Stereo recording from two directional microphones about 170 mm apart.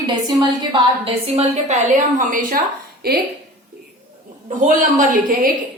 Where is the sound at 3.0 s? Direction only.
65° right (ahead or behind).